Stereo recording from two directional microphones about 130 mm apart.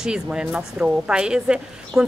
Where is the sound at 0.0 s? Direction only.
5° right (ahead or behind).